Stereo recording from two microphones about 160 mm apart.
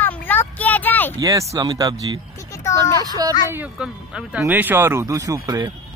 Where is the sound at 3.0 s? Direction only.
25° right (ahead or behind).